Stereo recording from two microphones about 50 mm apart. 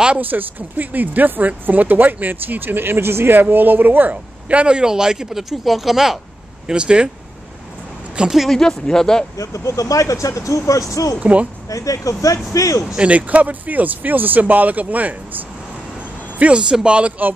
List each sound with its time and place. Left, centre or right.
0.2 s speech: right
4.5 s speech: right; by 6.1 s centre
6.7 s speech: centre
8.5 s speech: centre
9.4 s speech: left
11.1 s speech: right
11.7 s speech: left
12.8 s speech: centre
13.1 s speech: right